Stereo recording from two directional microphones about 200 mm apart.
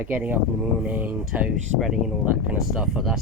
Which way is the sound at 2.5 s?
5° right (ahead or behind).